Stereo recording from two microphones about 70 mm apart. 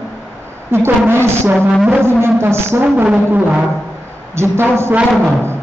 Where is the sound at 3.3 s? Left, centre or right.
Centre.